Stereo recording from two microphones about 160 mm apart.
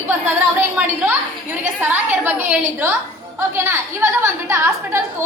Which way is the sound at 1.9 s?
10° right (ahead or behind).